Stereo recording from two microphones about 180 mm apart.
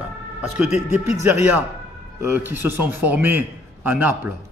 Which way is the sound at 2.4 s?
10° right (ahead or behind).